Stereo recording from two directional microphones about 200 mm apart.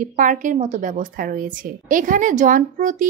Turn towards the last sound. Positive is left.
turn(degrees=-40)  # may be behind; listen again after turning